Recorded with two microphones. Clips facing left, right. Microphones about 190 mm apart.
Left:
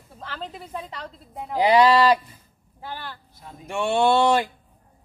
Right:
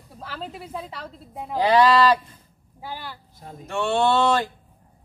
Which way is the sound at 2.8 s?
10° right (ahead or behind).